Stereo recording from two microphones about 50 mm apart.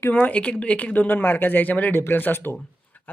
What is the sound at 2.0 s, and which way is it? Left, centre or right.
Speech, left.